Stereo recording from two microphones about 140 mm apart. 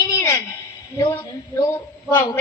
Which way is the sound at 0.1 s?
20° left (ahead or behind).